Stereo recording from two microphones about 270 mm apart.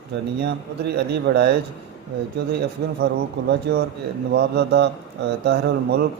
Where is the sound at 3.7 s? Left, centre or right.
Right.